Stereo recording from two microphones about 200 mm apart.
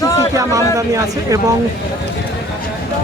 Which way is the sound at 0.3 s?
15° right (ahead or behind).